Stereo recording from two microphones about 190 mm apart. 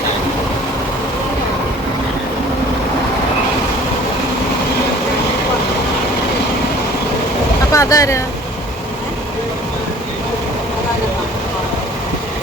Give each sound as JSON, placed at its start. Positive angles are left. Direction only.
{"t": 7.7, "sound": "speech", "side_deg": 15}